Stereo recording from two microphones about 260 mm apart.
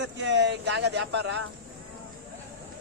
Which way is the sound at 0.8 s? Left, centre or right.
Right.